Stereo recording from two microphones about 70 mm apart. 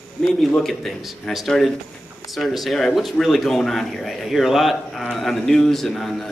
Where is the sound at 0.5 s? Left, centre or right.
Centre.